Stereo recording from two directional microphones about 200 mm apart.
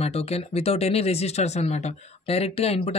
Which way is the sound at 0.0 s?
30° left (ahead or behind).